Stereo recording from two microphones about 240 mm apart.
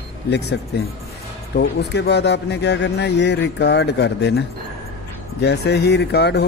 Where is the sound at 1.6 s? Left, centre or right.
Left.